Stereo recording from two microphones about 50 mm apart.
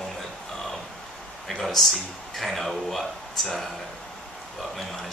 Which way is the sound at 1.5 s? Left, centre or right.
Centre.